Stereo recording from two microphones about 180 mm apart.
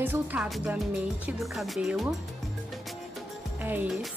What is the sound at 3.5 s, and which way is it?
Speech, 10° right (ahead or behind).